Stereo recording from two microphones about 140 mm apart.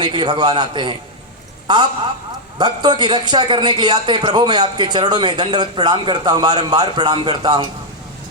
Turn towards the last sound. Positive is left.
turn(degrees=-30)  # may be behind; listen again after turning